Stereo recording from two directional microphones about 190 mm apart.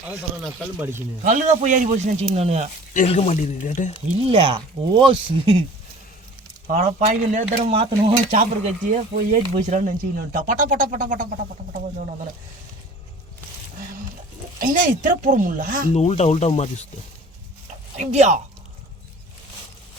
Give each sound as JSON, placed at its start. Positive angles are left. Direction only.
{"t": 0.8, "sound": "speech", "side_deg": -10}
{"t": 1.2, "sound": "speech", "side_deg": -40}
{"t": 3.1, "sound": "speech", "side_deg": 35}
{"t": 4.3, "sound": "speech", "side_deg": -30}
{"t": 6.7, "sound": "speech", "side_deg": -40}
{"t": 14.6, "sound": "speech", "side_deg": -45}
{"t": 16.0, "sound": "speech", "side_deg": 35}
{"t": 17.9, "sound": "speech", "side_deg": -35}